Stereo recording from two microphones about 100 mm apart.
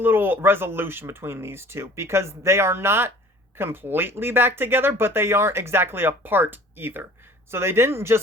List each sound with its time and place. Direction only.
0.0 s speech: 20° right (ahead or behind)